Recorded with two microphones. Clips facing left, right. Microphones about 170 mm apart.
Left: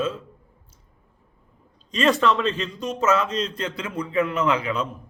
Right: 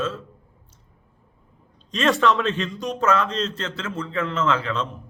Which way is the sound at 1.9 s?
Centre (ahead or behind).